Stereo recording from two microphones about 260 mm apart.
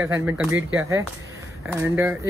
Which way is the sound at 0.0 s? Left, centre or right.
Centre.